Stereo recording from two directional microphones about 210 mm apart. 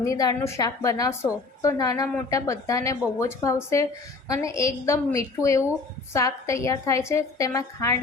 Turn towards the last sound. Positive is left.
turn(degrees=15)  # may be behind; listen again after turning